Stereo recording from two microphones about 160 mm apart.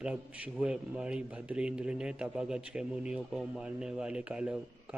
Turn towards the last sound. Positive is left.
turn(degrees=-5)  # may be behind; listen again after turning